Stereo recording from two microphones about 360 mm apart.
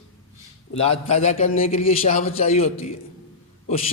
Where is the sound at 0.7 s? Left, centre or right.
Centre.